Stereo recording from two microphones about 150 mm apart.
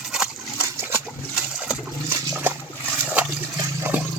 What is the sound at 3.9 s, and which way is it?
Water, 10° right (ahead or behind).